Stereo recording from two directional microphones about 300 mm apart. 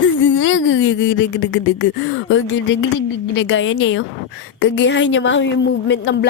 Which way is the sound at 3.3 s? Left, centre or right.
Left.